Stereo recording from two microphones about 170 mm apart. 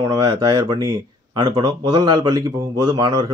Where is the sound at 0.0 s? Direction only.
20° right (ahead or behind).